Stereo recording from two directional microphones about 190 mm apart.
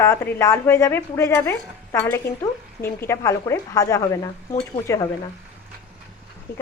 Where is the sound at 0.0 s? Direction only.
15° left (ahead or behind).